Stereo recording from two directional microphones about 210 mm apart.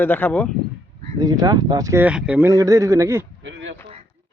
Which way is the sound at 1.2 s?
20° right (ahead or behind).